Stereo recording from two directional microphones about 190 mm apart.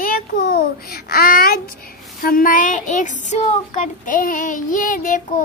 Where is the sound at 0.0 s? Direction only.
50° left (ahead or behind).